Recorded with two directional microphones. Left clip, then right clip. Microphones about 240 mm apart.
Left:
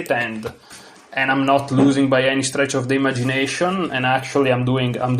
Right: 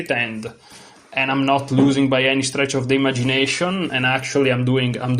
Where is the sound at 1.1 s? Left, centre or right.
Right.